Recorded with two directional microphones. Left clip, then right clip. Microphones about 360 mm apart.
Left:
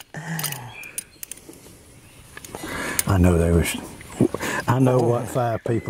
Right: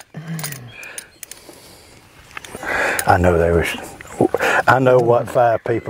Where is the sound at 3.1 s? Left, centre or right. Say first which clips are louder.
Right 7 dB; right.